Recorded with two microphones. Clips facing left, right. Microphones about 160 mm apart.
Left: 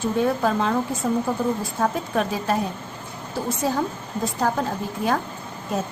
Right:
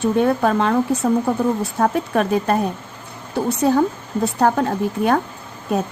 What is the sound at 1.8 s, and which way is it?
Speech, 55° right (ahead or behind).